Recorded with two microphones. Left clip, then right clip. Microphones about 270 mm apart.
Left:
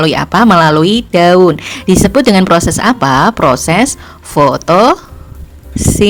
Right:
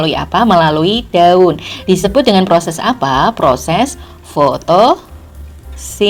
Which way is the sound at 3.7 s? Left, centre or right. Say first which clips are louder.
Left 3 dB; left.